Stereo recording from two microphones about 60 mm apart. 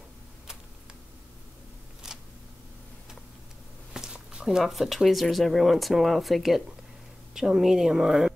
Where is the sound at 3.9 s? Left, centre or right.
Centre.